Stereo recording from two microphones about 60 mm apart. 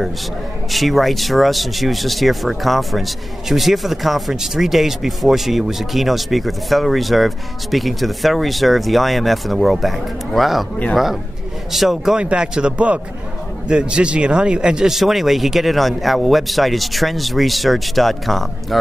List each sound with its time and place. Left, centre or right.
0.7 s speech: centre
11.7 s speech: centre
12.2 s a man's voice: centre